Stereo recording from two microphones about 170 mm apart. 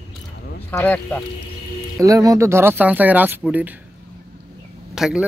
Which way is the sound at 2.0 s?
20° right (ahead or behind).